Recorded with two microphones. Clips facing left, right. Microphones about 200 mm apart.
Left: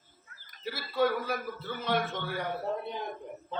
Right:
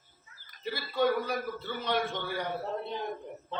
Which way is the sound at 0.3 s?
55° left (ahead or behind).